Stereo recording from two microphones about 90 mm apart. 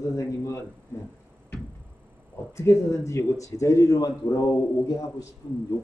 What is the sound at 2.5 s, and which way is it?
A man's voice, 30° left (ahead or behind).